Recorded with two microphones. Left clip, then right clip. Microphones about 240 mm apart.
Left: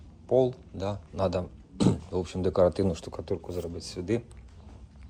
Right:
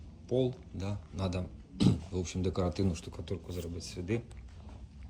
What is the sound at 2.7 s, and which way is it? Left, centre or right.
Speech, left.